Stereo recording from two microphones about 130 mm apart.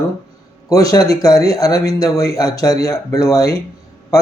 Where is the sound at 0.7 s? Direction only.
25° left (ahead or behind).